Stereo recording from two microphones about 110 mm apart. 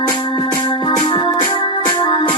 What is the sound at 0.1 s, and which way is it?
Music, 45° left (ahead or behind).